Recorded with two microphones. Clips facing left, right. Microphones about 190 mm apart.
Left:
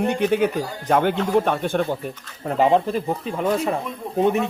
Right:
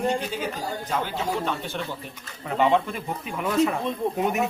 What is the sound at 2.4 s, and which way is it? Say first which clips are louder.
Speech: left 4 dB; 35° left (ahead or behind).